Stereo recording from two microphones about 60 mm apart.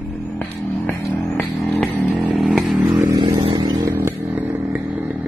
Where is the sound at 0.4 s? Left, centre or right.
Left.